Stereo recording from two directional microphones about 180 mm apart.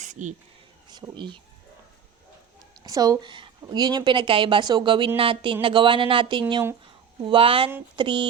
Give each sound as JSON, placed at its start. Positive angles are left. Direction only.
{"t": 0.0, "sound": "a sound", "side_deg": -40}
{"t": 0.9, "sound": "speech", "side_deg": -25}
{"t": 2.8, "sound": "a woman's voice", "side_deg": -20}